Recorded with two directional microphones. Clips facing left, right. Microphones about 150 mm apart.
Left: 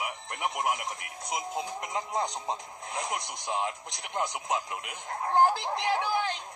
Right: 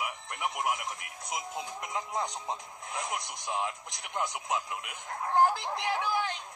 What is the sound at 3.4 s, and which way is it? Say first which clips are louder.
Speech: left 2 dB; 25° left (ahead or behind).